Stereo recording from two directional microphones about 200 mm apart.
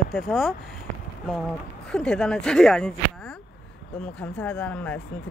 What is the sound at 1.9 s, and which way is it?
Speech, 5° left (ahead or behind).